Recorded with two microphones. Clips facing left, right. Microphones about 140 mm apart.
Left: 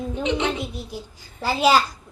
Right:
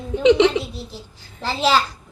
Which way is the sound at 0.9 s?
15° left (ahead or behind).